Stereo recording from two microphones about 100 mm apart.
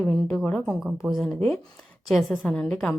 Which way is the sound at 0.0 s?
15° left (ahead or behind).